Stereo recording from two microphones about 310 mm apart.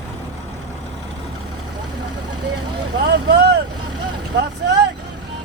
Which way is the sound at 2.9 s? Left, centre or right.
Right.